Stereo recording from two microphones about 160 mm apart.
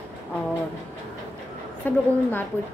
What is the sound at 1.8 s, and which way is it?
Speech, 10° left (ahead or behind).